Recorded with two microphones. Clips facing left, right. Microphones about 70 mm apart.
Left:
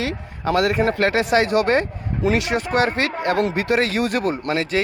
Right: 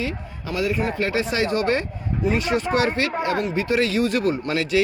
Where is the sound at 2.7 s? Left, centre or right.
Left.